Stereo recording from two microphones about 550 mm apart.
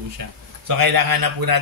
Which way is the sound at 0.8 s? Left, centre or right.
Right.